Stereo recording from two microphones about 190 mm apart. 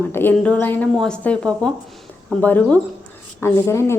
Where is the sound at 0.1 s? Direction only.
10° left (ahead or behind).